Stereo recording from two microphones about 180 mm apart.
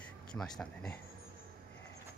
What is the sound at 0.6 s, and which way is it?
Speech, 5° left (ahead or behind).